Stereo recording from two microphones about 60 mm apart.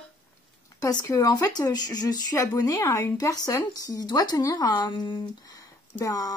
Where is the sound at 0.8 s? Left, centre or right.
Left.